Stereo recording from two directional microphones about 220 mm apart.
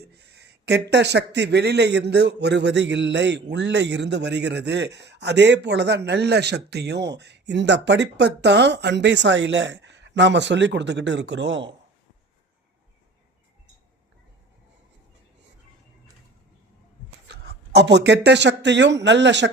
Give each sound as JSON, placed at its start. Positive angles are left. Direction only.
{"t": 0.2, "sound": "speech", "side_deg": -50}
{"t": 17.2, "sound": "speech", "side_deg": -50}